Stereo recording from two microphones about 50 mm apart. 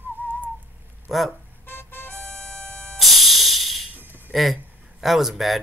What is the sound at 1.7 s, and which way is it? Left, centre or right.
Music, left.